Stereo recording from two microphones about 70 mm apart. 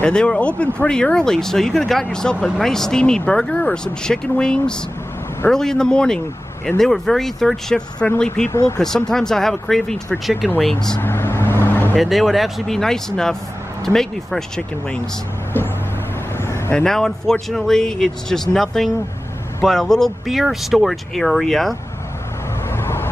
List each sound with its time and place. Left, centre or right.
0.0 s speech: centre
8.0 s speech: centre
8.5 s speech: left
8.7 s speech: centre
11.0 s vehicle: left
12.0 s speech: centre
16.4 s vehicle: left
16.7 s speech: centre
22.7 s vehicle: left